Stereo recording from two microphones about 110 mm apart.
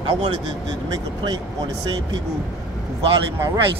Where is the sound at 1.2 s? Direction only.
40° right (ahead or behind).